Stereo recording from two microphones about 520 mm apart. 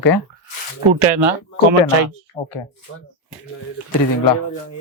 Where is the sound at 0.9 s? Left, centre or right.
Right.